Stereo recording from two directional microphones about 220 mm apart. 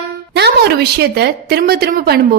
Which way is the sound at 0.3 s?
50° right (ahead or behind).